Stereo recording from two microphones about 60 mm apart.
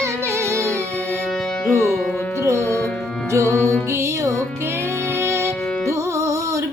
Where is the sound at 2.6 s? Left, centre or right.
Left.